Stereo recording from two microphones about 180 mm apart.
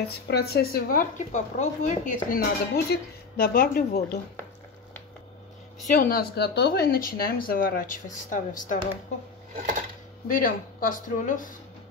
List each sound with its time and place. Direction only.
0.3 s speech: 60° left (ahead or behind)
5.9 s speech: 50° left (ahead or behind)
10.2 s speech: 50° left (ahead or behind)